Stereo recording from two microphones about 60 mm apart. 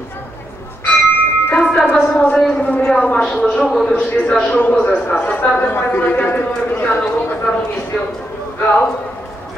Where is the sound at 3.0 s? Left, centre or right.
Left.